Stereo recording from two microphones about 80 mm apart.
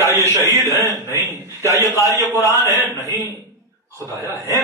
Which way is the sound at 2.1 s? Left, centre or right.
Left.